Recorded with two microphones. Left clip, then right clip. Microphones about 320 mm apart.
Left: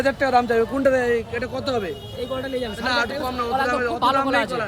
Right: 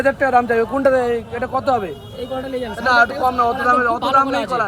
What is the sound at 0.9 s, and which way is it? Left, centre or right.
Speech, right.